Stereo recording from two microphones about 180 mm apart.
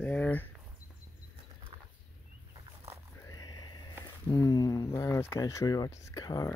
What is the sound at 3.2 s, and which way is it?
Speech, 20° left (ahead or behind).